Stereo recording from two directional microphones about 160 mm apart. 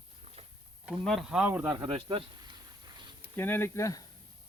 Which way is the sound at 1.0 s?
Centre (ahead or behind).